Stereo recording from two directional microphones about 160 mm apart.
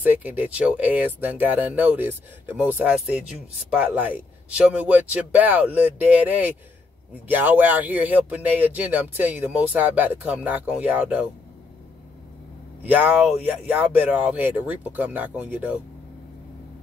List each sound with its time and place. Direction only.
0.0 s speech: 10° right (ahead or behind)
12.8 s speech: 10° right (ahead or behind)